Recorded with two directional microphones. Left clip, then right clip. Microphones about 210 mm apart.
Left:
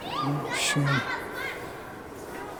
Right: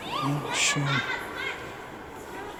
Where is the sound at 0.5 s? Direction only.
15° left (ahead or behind).